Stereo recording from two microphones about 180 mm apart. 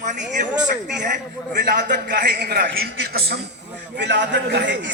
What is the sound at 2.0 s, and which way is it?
A man's voice, 65° right (ahead or behind).